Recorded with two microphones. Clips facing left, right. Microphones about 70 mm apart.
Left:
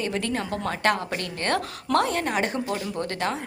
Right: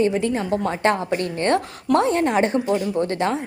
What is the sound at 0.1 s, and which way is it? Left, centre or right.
A woman's voice, centre.